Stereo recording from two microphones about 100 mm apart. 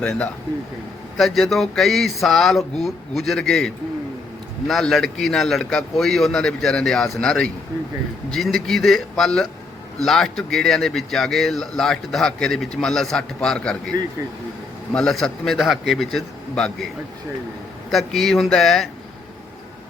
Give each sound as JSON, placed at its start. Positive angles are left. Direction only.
{"t": 0.0, "sound": "speech", "side_deg": 10}
{"t": 4.7, "sound": "speech", "side_deg": 0}
{"t": 14.2, "sound": "speech", "side_deg": -30}
{"t": 14.9, "sound": "speech", "side_deg": 5}
{"t": 17.9, "sound": "speech", "side_deg": 0}